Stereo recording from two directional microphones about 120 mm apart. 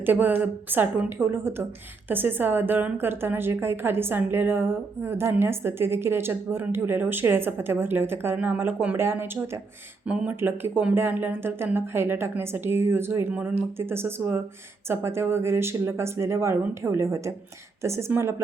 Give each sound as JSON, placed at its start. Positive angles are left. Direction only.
{"t": 0.0, "sound": "a woman's voice", "side_deg": -15}